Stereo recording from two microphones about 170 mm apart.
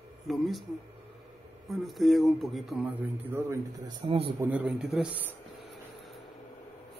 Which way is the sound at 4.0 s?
35° right (ahead or behind).